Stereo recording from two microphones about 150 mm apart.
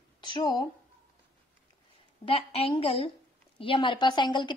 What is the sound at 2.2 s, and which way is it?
A woman's voice, 40° left (ahead or behind).